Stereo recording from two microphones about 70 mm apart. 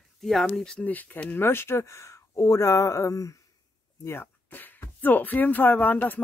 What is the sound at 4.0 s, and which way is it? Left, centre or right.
Speech, left.